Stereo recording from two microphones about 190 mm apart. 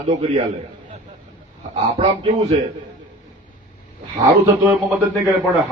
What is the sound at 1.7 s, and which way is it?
Speech, 35° right (ahead or behind).